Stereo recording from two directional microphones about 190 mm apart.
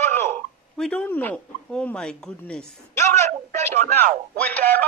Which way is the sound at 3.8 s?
45° right (ahead or behind).